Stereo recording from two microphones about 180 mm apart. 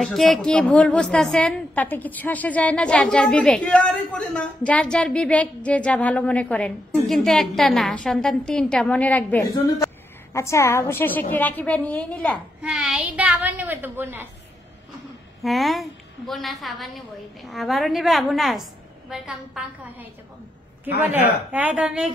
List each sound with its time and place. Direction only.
0.0 s a woman's voice: centre (ahead or behind)
15.4 s a woman's voice: centre (ahead or behind)
21.1 s a woman's voice: 10° right (ahead or behind)